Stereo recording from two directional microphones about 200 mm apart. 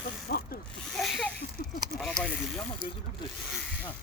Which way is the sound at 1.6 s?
50° left (ahead or behind).